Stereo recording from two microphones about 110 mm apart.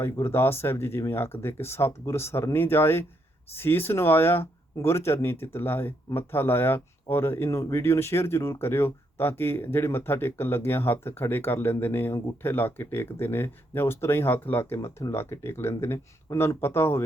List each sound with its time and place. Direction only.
0.0 s speech: 20° left (ahead or behind)